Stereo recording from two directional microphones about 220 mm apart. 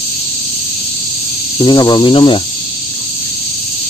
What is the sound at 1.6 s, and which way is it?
Speech, 20° left (ahead or behind).